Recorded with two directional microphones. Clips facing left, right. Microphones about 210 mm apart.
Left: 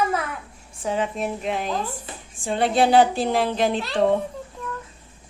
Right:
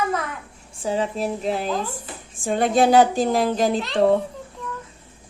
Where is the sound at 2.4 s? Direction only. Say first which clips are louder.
Right 2 dB; 45° right (ahead or behind).